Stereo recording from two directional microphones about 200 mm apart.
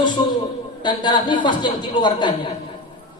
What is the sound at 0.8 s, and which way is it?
A man's voice, 20° left (ahead or behind).